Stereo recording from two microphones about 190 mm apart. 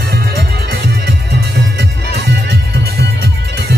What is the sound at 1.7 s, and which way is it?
Music, 60° right (ahead or behind).